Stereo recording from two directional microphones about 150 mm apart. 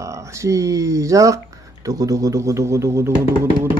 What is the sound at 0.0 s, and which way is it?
Speech, 20° right (ahead or behind).